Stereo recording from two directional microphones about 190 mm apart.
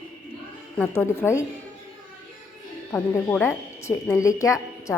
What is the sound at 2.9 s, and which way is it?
Speech, 10° left (ahead or behind).